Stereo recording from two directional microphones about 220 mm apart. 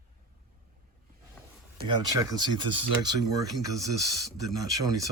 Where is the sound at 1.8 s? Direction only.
20° right (ahead or behind).